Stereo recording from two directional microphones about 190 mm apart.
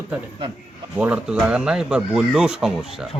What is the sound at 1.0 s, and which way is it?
A man's voice, 5° right (ahead or behind).